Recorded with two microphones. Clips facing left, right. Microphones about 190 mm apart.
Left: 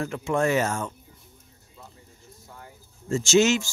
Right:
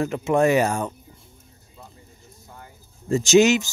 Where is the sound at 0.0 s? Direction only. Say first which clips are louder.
Right 5 dB; 20° right (ahead or behind).